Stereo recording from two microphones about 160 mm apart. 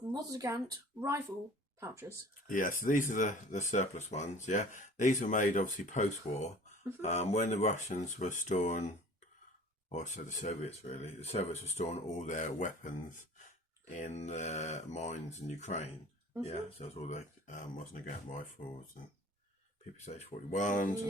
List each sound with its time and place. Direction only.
0.1 s speech: 20° right (ahead or behind)
2.5 s speech: 55° left (ahead or behind)
9.9 s speech: 50° left (ahead or behind)
20.1 s speech: 45° left (ahead or behind)